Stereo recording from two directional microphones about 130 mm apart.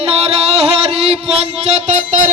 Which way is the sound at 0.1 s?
45° right (ahead or behind).